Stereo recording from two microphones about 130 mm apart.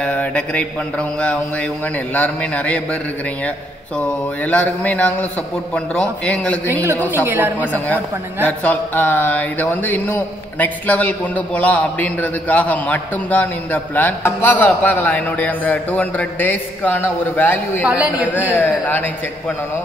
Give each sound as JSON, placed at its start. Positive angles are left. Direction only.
{"t": 0.0, "sound": "speech", "side_deg": 10}
{"t": 4.0, "sound": "speech", "side_deg": 10}
{"t": 7.2, "sound": "a woman's voice", "side_deg": -15}
{"t": 7.6, "sound": "speech", "side_deg": 15}
{"t": 17.8, "sound": "a woman's voice", "side_deg": -10}
{"t": 18.3, "sound": "speech", "side_deg": 15}